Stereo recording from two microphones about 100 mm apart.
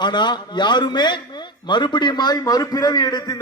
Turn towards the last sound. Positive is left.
turn(degrees=40)  # may be behind; listen again after turning